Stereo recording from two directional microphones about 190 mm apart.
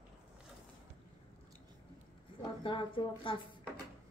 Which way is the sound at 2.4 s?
25° left (ahead or behind).